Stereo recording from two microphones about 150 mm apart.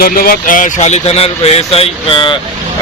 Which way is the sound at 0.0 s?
75° left (ahead or behind).